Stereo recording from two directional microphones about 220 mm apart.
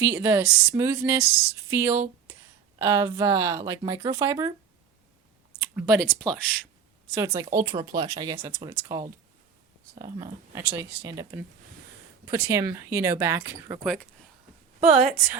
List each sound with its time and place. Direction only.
0.0 s speech: 10° right (ahead or behind)
5.5 s speech: 5° right (ahead or behind)
7.2 s speech: 15° right (ahead or behind)
13.8 s speech: centre (ahead or behind)
14.8 s a woman's voice: 30° right (ahead or behind)